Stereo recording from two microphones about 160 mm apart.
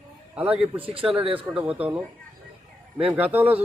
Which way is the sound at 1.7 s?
10° right (ahead or behind).